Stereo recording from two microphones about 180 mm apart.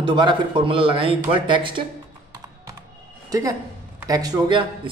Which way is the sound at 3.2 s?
20° right (ahead or behind).